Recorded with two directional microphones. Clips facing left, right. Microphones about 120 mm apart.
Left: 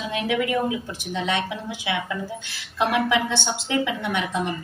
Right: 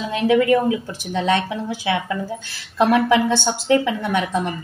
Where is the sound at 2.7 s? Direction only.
40° right (ahead or behind).